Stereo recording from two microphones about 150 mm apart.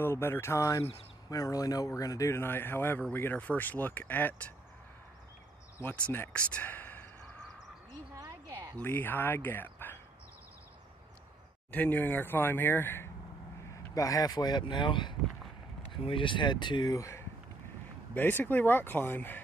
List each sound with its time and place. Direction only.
0.0 s speech: 15° left (ahead or behind)
5.8 s speech: 15° left (ahead or behind)
8.1 s a sound: 25° right (ahead or behind)
8.7 s speech: 15° left (ahead or behind)
11.7 s speech: 10° left (ahead or behind)